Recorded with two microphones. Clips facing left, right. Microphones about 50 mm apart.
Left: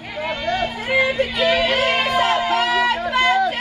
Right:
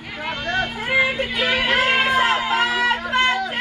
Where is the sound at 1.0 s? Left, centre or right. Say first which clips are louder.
Left 2 dB; right.